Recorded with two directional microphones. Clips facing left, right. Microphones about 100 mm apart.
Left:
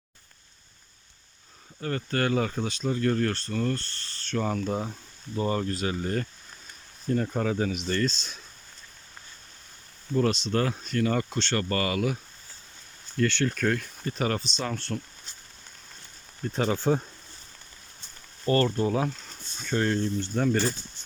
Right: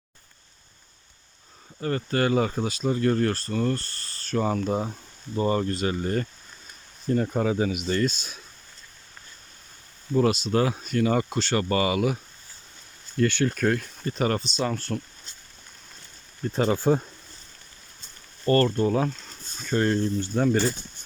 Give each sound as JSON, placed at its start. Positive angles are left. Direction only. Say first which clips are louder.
{"t": 1.8, "sound": "speech", "louder": "right 3 dB", "side_deg": -5}
{"t": 10.2, "sound": "speech", "louder": "right 3 dB", "side_deg": -10}
{"t": 13.1, "sound": "speech", "louder": "right 3 dB", "side_deg": -10}
{"t": 16.5, "sound": "speech", "louder": "right 3 dB", "side_deg": 0}
{"t": 18.4, "sound": "speech", "louder": "right 3 dB", "side_deg": 10}